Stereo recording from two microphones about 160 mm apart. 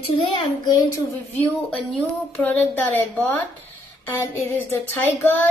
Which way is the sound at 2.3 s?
10° left (ahead or behind).